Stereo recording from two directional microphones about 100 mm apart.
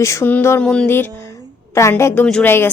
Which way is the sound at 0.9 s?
25° left (ahead or behind).